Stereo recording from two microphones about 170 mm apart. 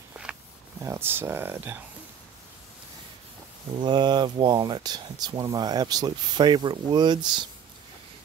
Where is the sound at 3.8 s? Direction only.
25° right (ahead or behind).